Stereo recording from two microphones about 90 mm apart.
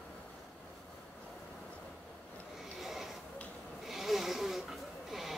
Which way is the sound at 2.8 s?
Centre (ahead or behind).